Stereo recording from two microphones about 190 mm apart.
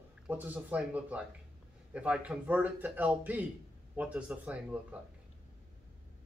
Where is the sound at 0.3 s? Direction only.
10° right (ahead or behind).